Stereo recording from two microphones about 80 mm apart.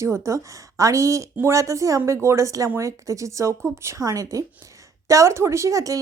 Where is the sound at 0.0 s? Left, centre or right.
Right.